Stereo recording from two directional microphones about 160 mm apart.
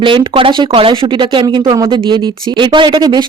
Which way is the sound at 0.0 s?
35° right (ahead or behind).